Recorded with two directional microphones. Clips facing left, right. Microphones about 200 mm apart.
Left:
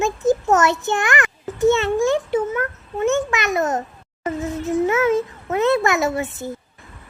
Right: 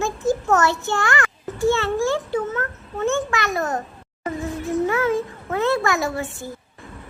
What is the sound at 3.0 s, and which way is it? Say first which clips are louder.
A child's voice: left 2 dB; 20° left (ahead or behind).